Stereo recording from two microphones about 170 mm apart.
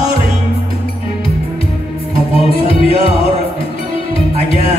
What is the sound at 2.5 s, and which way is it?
Music, 35° left (ahead or behind).